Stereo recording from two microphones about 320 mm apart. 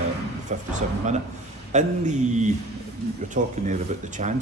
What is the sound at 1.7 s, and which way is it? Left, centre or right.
Speech, right.